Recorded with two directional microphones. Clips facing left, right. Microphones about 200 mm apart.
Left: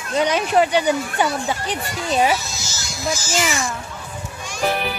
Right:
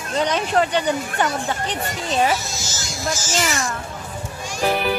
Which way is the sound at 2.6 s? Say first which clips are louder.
Right 2 dB; 45° right (ahead or behind).